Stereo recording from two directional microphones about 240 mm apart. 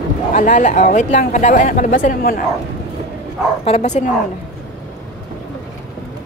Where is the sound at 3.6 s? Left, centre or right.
Left.